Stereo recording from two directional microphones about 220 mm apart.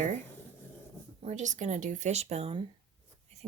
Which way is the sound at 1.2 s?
35° right (ahead or behind).